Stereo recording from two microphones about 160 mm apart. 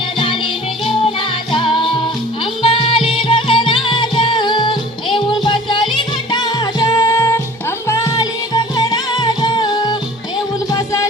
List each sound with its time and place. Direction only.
1.5 s music: 30° left (ahead or behind)